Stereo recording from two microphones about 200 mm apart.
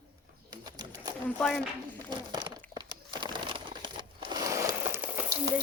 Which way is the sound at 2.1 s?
20° right (ahead or behind).